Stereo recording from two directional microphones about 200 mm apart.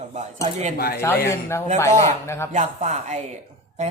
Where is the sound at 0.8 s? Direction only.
50° left (ahead or behind).